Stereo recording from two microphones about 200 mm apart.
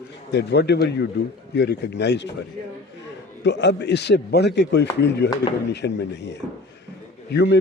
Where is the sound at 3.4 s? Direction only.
60° left (ahead or behind).